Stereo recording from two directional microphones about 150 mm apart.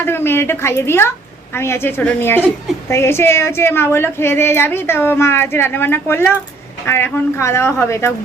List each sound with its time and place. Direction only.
0.0 s a woman's voice: 15° left (ahead or behind)